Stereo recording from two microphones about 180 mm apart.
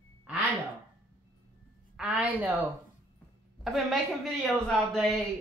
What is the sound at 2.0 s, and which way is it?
Speech, 5° right (ahead or behind).